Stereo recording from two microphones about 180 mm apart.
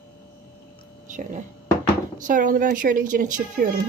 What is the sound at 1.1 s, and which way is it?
Speech, 45° right (ahead or behind).